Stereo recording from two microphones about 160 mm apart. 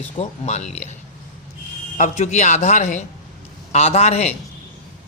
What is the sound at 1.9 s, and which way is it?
A man's voice, 45° left (ahead or behind).